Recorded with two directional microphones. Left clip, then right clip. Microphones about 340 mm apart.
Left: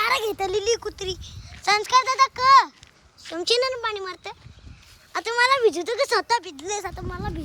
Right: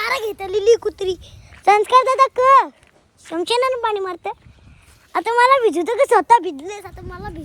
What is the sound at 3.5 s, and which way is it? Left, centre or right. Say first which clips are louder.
Speech: right 4 dB; centre.